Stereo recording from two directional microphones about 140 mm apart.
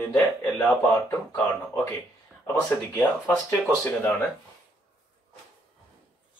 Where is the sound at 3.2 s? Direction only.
25° left (ahead or behind).